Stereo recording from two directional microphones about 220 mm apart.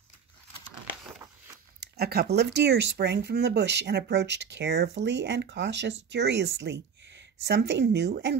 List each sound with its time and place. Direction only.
1.8 s speech: 45° right (ahead or behind)